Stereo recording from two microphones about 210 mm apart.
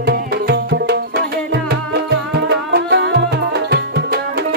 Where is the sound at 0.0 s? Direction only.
50° right (ahead or behind).